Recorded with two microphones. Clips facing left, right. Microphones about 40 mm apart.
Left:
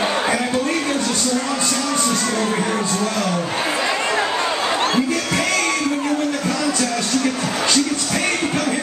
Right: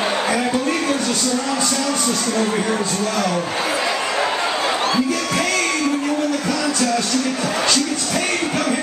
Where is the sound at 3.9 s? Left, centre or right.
Left.